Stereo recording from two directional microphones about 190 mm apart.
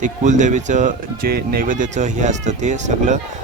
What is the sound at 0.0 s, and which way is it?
Speech, 40° right (ahead or behind).